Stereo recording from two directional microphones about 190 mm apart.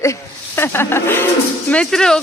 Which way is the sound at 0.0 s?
15° left (ahead or behind).